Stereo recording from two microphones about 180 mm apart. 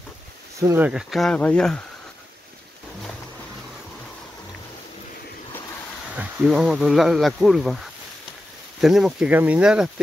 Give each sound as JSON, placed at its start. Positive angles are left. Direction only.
{"t": 0.6, "sound": "speech", "side_deg": -20}
{"t": 0.8, "sound": "speech", "side_deg": 0}
{"t": 6.1, "sound": "speech", "side_deg": -5}